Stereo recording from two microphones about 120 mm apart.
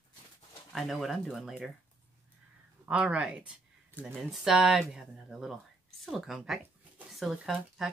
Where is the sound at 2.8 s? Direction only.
10° right (ahead or behind).